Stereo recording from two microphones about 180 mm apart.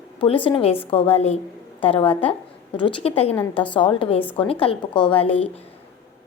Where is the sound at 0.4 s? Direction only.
30° left (ahead or behind).